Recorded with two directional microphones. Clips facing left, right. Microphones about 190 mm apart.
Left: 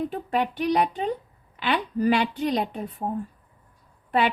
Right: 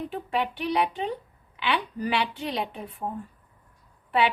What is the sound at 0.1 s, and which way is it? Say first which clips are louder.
A woman's voice: left 2 dB; 40° left (ahead or behind).